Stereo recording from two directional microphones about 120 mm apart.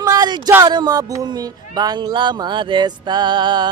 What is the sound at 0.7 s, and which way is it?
Speech, 35° right (ahead or behind).